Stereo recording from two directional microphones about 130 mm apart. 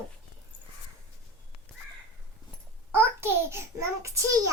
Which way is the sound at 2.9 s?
20° right (ahead or behind).